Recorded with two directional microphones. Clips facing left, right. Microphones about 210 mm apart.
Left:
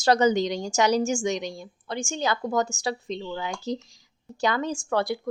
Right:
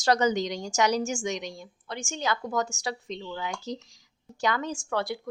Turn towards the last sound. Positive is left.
turn(degrees=40)  # may be behind; listen again after turning